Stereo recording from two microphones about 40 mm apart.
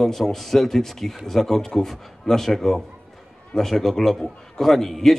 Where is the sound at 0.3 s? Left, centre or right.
Centre.